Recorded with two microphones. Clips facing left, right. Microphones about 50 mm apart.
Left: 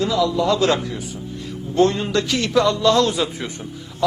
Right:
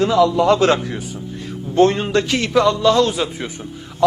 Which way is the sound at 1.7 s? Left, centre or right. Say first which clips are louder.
Right 3 dB; right.